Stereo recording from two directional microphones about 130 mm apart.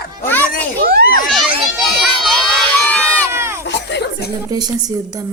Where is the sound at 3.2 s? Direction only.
20° right (ahead or behind).